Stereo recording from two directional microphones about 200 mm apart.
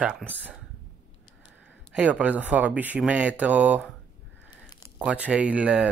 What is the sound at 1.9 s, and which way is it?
Speech, 5° right (ahead or behind).